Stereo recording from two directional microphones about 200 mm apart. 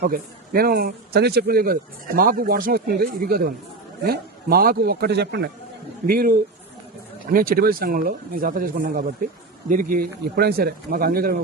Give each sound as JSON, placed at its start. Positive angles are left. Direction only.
{"t": 0.0, "sound": "speech", "side_deg": -50}